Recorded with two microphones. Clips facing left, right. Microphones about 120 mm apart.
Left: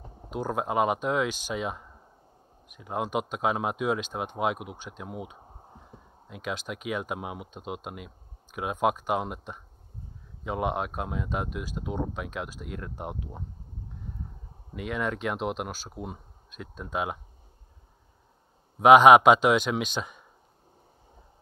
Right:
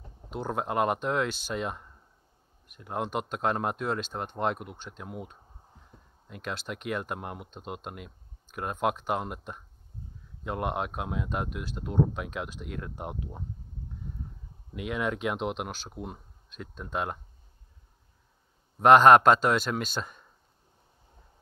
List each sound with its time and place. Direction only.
0.3 s speech: 5° left (ahead or behind)
5.4 s a sound: 45° left (ahead or behind)
6.2 s speech: centre (ahead or behind)
14.7 s speech: centre (ahead or behind)
18.8 s a man's voice: 10° left (ahead or behind)